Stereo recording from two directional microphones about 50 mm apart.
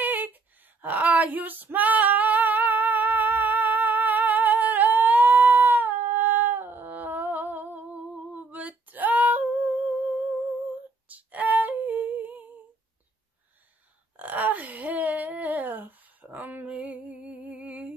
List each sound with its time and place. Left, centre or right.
0.0 s female singing: right
11.1 s humming: right
14.1 s a sound: right
16.6 s music: right